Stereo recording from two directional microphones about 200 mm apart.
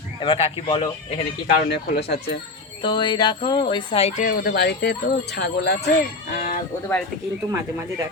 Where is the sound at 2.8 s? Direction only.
25° left (ahead or behind); by 5.8 s 55° left (ahead or behind).